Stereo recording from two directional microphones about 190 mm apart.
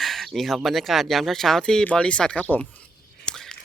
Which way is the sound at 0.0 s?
Centre (ahead or behind).